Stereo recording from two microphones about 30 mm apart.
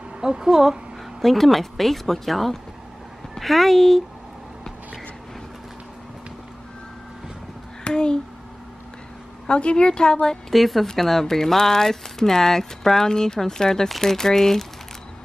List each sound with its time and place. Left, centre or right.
0.2 s a woman's voice: right
1.2 s speech: centre
7.9 s speech: left
9.5 s a woman's voice: left
10.5 s speech: centre